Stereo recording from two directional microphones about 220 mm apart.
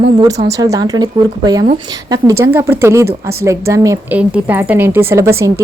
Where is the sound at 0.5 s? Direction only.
15° right (ahead or behind).